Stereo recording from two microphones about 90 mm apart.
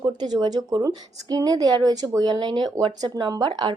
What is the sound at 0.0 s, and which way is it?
Speech, 55° right (ahead or behind).